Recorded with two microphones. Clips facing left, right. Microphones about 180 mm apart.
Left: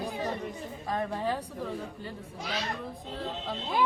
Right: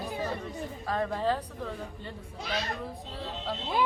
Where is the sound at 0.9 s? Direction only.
15° left (ahead or behind).